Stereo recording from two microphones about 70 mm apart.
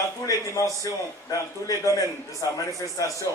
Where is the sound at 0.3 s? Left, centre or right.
Left.